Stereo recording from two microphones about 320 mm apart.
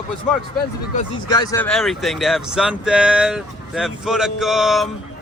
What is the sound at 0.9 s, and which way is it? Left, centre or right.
Speech, centre.